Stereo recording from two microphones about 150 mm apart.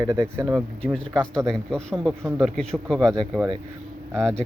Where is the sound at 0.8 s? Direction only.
5° left (ahead or behind).